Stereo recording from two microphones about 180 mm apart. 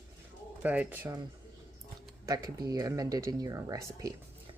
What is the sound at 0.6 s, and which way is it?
Speech, 10° right (ahead or behind).